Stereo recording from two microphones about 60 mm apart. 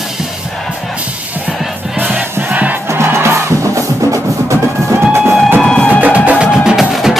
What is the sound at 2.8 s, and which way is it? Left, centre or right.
Music, right.